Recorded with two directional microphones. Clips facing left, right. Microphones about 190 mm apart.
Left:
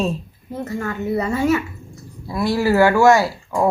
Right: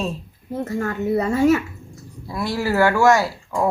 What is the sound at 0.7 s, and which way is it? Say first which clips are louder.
Speech: right 1 dB; 45° right (ahead or behind).